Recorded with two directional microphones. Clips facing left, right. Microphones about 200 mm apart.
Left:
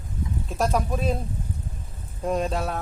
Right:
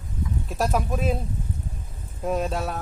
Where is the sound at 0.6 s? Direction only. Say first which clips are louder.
Even; 5° right (ahead or behind).